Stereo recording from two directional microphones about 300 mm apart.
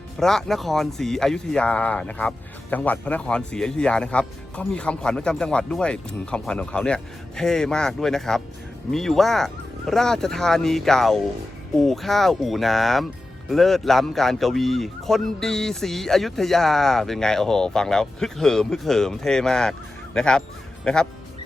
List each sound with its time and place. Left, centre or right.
0.2 s speech: centre